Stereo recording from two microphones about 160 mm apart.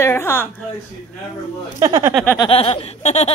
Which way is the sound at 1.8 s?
20° right (ahead or behind).